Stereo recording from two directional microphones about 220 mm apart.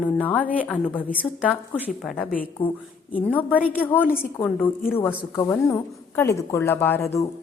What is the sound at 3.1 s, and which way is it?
A woman's voice, 5° left (ahead or behind).